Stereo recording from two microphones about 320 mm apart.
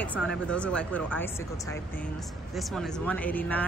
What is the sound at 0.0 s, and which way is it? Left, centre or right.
Speech, centre.